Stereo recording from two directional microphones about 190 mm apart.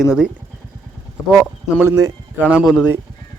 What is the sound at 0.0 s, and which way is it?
Speech, 5° right (ahead or behind).